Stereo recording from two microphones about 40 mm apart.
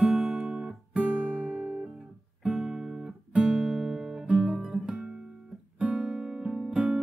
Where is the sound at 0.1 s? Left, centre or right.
Centre.